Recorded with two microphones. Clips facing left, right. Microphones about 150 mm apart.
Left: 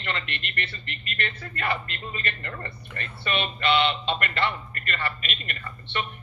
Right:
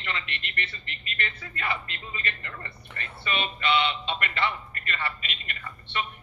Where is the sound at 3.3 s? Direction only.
60° left (ahead or behind).